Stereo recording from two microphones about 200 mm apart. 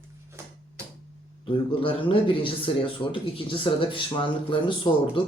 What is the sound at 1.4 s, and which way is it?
Speech, 25° left (ahead or behind).